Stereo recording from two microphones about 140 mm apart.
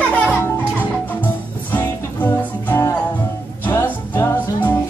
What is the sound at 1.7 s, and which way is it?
Music, 15° left (ahead or behind).